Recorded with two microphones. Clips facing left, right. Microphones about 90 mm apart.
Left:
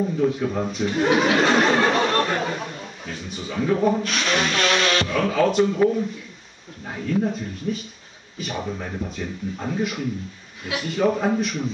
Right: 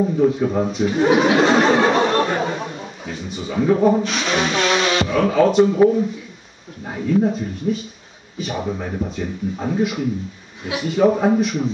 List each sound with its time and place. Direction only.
0.2 s speech: 5° right (ahead or behind)
8.6 s speech: 15° right (ahead or behind)